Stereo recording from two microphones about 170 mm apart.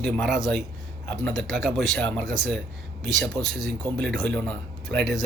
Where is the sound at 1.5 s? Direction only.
5° right (ahead or behind).